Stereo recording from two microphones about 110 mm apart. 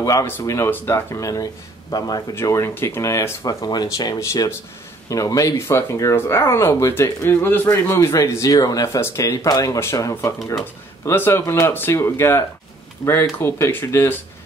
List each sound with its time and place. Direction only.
0.0 s speech: 30° left (ahead or behind)
2.3 s speech: 25° left (ahead or behind)